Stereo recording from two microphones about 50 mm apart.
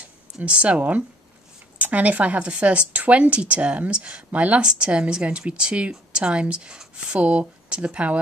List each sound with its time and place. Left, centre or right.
0.5 s a woman's voice: right